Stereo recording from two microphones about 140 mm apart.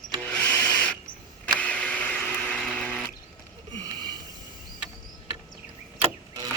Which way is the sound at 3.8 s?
30° right (ahead or behind).